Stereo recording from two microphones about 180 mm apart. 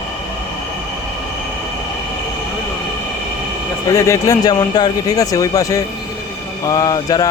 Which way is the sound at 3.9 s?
20° left (ahead or behind).